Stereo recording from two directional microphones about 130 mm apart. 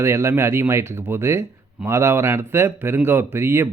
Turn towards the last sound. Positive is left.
turn(degrees=-20)  # may be behind; listen again after turning